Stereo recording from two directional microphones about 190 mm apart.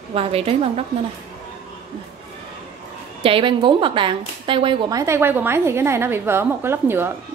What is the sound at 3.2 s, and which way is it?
A woman's voice, 25° right (ahead or behind).